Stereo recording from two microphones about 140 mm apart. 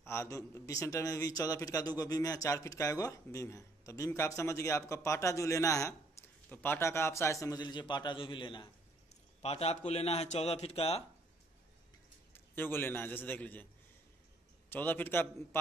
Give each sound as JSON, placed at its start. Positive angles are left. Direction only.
{"t": 0.0, "sound": "a man's voice", "side_deg": 20}
{"t": 9.4, "sound": "a man's voice", "side_deg": 50}
{"t": 12.5, "sound": "a man's voice", "side_deg": 15}
{"t": 14.7, "sound": "a man's voice", "side_deg": 15}